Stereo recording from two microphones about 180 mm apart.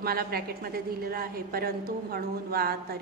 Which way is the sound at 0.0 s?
60° right (ahead or behind).